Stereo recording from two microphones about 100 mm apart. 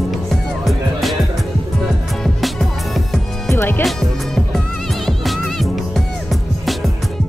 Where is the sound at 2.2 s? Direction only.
Centre (ahead or behind).